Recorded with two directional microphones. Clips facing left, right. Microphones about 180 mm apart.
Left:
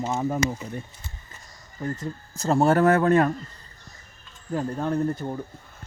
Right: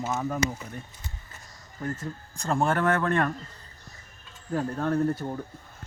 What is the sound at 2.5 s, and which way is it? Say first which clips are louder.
Speech: left 6 dB; 40° left (ahead or behind).